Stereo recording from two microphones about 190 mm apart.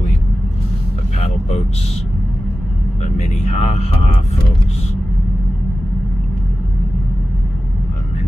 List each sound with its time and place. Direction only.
3.0 s speech: 35° left (ahead or behind)